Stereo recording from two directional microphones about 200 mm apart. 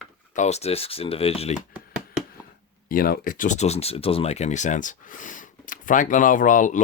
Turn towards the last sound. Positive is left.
turn(degrees=40)  # may be behind; listen again after turning